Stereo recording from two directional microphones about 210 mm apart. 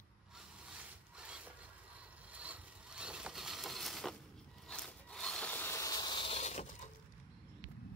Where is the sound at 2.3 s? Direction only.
5° right (ahead or behind).